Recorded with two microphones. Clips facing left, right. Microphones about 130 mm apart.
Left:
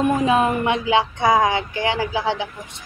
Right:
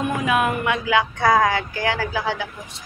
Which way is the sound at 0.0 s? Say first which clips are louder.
Left 3 dB; 30° left (ahead or behind).